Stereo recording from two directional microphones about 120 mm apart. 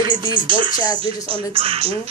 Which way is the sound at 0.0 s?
35° right (ahead or behind).